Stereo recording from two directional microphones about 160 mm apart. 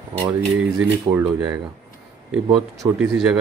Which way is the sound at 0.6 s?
5° right (ahead or behind).